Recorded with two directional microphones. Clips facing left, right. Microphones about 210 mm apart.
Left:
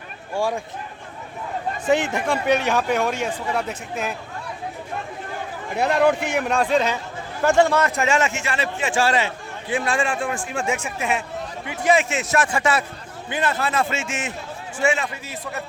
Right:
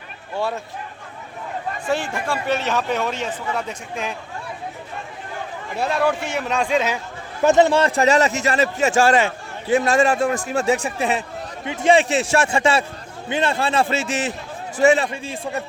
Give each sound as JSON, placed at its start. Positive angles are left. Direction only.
{"t": 0.3, "sound": "a man's voice", "side_deg": 10}
{"t": 1.9, "sound": "a man's voice", "side_deg": 20}
{"t": 5.7, "sound": "a man's voice", "side_deg": 20}
{"t": 6.7, "sound": "speech", "side_deg": -5}
{"t": 7.4, "sound": "a man's voice", "side_deg": -20}
{"t": 11.6, "sound": "a man's voice", "side_deg": -25}